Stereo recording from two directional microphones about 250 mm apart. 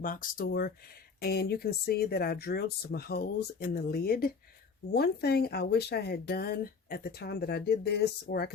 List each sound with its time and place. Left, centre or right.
0.0 s speech: left